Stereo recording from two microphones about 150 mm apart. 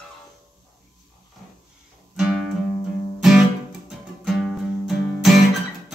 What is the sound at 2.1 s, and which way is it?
Music, 5° right (ahead or behind).